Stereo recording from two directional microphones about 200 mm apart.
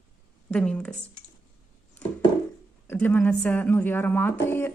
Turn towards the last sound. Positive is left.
turn(degrees=10)  # may be behind; listen again after turning